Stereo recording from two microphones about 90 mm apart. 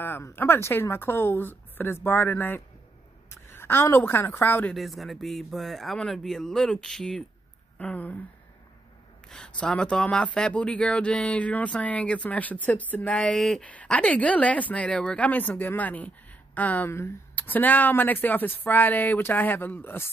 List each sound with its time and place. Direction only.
0.0 s a woman's voice: 25° left (ahead or behind)
4.7 s speech: centre (ahead or behind)
7.8 s speech: 15° left (ahead or behind)
9.6 s speech: 10° left (ahead or behind)
13.2 s speech: 5° left (ahead or behind)
13.7 s speech: 15° left (ahead or behind)